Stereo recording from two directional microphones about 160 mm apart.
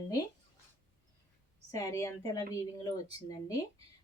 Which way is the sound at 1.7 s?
20° left (ahead or behind).